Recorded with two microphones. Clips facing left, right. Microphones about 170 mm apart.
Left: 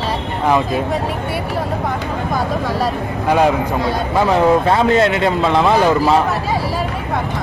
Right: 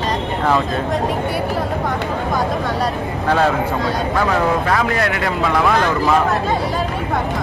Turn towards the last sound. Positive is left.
turn(degrees=20)  # may be behind; listen again after turning